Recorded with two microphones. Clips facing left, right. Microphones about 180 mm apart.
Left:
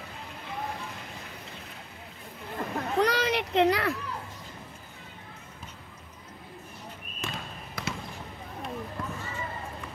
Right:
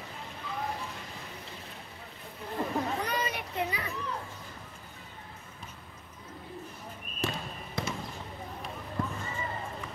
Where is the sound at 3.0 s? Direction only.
85° left.